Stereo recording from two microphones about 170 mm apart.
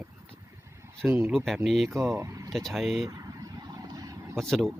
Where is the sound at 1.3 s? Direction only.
Centre (ahead or behind).